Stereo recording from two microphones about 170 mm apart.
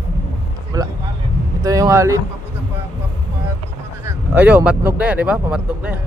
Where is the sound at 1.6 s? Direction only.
20° right (ahead or behind).